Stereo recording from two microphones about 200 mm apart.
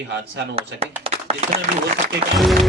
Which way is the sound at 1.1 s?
30° right (ahead or behind).